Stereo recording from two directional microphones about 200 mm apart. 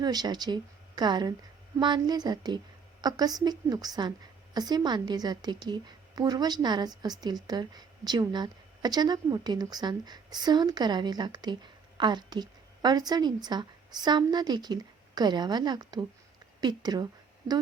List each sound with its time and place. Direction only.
0.0 s a woman's voice: 20° right (ahead or behind)